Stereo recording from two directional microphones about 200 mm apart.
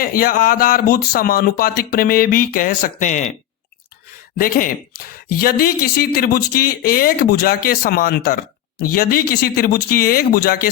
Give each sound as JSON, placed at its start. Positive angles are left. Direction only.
{"t": 0.0, "sound": "speech", "side_deg": 45}
{"t": 4.4, "sound": "speech", "side_deg": 45}